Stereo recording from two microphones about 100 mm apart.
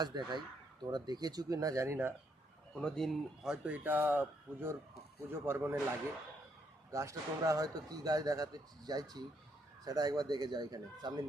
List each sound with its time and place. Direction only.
0.0 s speech: 45° right (ahead or behind); by 2.0 s 30° right (ahead or behind)
2.7 s speech: 5° left (ahead or behind); by 5.8 s 25° right (ahead or behind)
6.9 s speech: 30° right (ahead or behind)